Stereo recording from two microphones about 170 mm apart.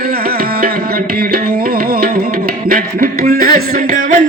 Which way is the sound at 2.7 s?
55° right (ahead or behind).